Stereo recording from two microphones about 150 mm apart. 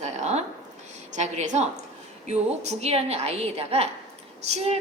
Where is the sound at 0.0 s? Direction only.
50° right (ahead or behind).